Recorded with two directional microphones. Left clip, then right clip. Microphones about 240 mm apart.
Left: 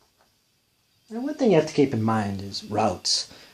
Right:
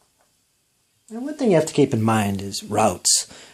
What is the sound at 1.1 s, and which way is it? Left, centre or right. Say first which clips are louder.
Speech: right 1 dB; right.